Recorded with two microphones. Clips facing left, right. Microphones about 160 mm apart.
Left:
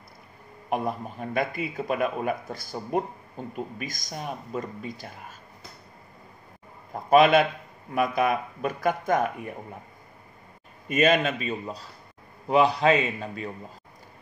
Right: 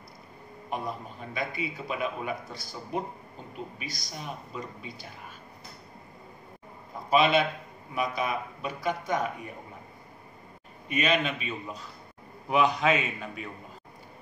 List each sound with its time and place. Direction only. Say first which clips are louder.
0.7 s a man's voice: left 6 dB; 55° left (ahead or behind)
7.1 s a man's voice: left 5 dB; 50° left (ahead or behind)
10.9 s a man's voice: left 5 dB; 45° left (ahead or behind)